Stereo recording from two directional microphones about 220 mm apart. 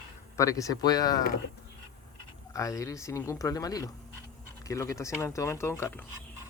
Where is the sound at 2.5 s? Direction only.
15° left (ahead or behind).